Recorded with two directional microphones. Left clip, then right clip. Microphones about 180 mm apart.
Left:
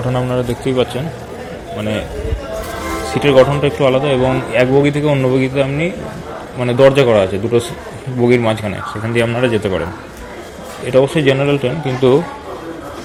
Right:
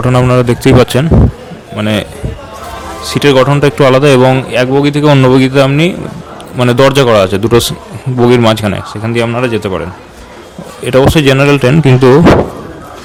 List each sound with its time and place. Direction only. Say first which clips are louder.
0.1 s a man's voice: right 9 dB; 55° right (ahead or behind)
3.2 s a man's voice: right 3 dB; 45° right (ahead or behind); by 4.4 s 65° right (ahead or behind)
4.5 s a man's voice: right 3 dB; 40° right (ahead or behind)
5.1 s speech: right 7 dB; 55° right (ahead or behind)
9.1 s speech: right 3 dB; 30° right (ahead or behind)
10.8 s speech: right 5 dB; 45° right (ahead or behind)